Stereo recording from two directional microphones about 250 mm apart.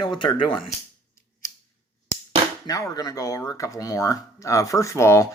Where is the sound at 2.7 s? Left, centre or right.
Centre.